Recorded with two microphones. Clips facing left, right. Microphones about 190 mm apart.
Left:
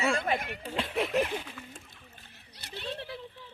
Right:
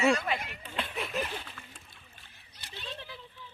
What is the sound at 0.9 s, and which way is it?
Speech, 65° left (ahead or behind).